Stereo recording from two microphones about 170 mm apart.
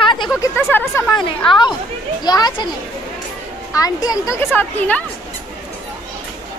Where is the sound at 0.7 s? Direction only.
10° left (ahead or behind).